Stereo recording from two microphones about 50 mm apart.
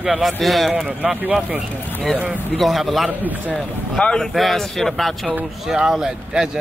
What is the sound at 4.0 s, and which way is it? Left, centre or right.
Speech, centre.